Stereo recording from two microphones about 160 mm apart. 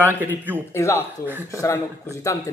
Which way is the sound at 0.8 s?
15° left (ahead or behind).